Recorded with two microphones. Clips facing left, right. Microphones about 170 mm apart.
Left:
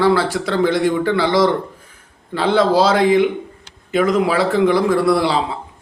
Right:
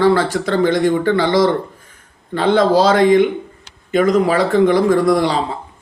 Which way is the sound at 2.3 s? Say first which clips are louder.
Right 2 dB; 5° left (ahead or behind).